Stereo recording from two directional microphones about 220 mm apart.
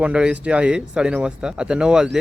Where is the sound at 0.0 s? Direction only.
5° right (ahead or behind).